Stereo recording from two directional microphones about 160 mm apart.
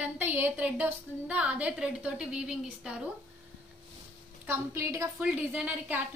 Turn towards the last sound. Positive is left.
turn(degrees=-10)  # may be behind; listen again after turning